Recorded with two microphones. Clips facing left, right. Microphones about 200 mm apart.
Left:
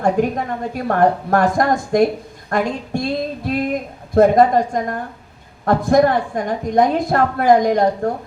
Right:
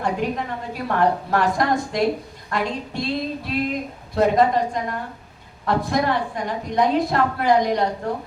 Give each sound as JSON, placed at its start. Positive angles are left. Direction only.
{"t": 0.0, "sound": "a woman's voice", "side_deg": 50}